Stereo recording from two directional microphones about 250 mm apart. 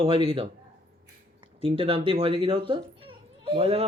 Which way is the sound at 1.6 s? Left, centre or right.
Right.